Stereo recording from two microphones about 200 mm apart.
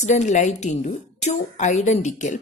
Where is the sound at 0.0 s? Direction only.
35° left (ahead or behind).